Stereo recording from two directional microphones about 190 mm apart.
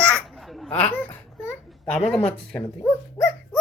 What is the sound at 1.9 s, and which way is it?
Speech, 5° left (ahead or behind).